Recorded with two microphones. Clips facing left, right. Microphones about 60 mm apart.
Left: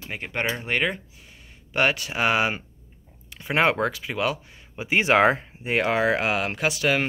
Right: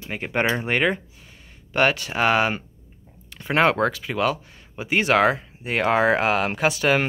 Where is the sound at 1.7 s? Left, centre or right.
Centre.